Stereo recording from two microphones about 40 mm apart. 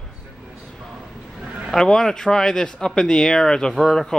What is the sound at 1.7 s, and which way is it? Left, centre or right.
Speech, centre.